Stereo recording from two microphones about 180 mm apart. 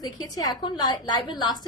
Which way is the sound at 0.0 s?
20° left (ahead or behind).